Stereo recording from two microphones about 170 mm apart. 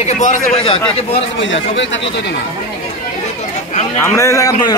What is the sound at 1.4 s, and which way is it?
Speech, 90° left.